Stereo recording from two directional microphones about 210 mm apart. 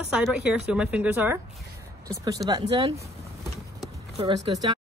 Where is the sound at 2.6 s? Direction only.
30° right (ahead or behind).